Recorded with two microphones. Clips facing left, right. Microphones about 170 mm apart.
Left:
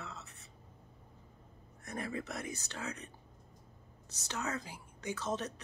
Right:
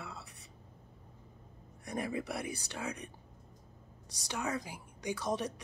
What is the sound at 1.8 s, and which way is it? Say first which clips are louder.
A woman's voice: right 3 dB; 15° right (ahead or behind).